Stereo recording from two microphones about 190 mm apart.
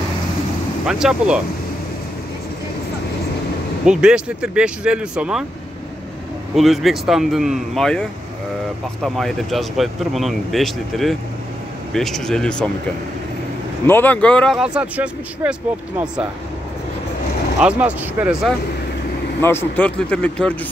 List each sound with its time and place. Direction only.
0.8 s speech: 5° right (ahead or behind)
3.8 s speech: 5° right (ahead or behind)
6.5 s speech: centre (ahead or behind)
13.8 s speech: 10° left (ahead or behind); by 15.5 s 5° right (ahead or behind)
17.6 s speech: 5° right (ahead or behind)
19.4 s speech: 10° left (ahead or behind)